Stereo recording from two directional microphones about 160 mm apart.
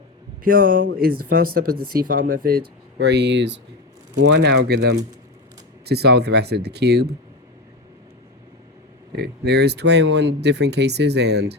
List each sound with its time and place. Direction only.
0.4 s speech: 60° right (ahead or behind); by 7.2 s 90° right
9.1 s speech: 90° right